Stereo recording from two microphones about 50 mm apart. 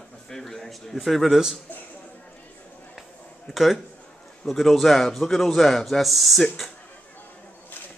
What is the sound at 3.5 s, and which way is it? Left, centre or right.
A man's voice, centre.